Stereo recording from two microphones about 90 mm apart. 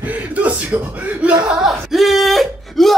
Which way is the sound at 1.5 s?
5° right (ahead or behind).